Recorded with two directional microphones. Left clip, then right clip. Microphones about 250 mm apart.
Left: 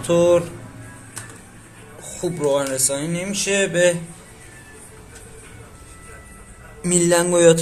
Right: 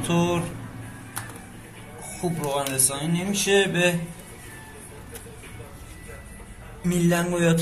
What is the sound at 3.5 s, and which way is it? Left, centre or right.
Mantra, left.